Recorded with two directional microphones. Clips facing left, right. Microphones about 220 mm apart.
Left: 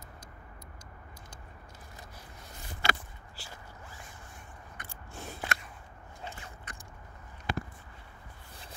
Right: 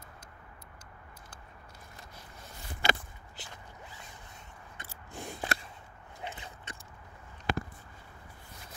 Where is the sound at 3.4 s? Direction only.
20° right (ahead or behind).